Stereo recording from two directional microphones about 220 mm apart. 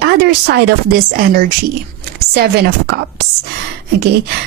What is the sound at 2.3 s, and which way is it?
Speech, 45° right (ahead or behind).